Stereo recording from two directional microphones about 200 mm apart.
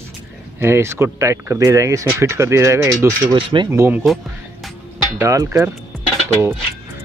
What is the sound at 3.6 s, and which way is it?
Speech, 10° right (ahead or behind).